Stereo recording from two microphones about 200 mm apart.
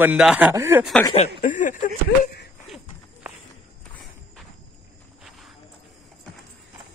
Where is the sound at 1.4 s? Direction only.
40° left (ahead or behind).